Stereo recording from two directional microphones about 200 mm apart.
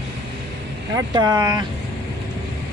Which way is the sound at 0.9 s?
15° right (ahead or behind).